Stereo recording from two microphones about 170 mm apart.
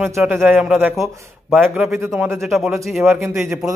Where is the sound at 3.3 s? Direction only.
15° right (ahead or behind).